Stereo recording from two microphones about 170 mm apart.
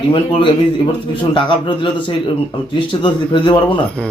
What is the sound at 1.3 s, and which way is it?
Speech, 30° left (ahead or behind).